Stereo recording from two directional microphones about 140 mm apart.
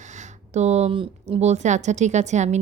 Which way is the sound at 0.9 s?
40° right (ahead or behind).